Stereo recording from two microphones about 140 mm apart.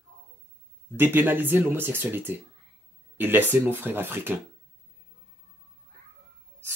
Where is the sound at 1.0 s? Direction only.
15° right (ahead or behind).